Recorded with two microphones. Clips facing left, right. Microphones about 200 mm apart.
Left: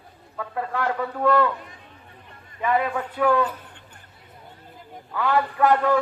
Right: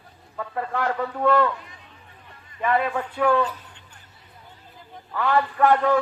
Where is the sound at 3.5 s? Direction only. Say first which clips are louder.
Left 1 dB; 55° left (ahead or behind).